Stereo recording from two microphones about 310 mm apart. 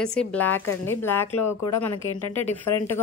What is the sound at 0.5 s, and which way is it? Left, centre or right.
Speech, left.